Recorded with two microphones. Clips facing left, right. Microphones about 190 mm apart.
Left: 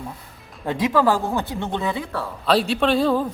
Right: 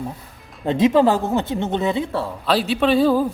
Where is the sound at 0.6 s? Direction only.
25° right (ahead or behind).